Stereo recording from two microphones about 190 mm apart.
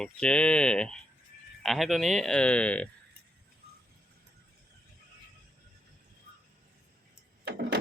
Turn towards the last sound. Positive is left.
turn(degrees=-65)  # may be behind; listen again after turning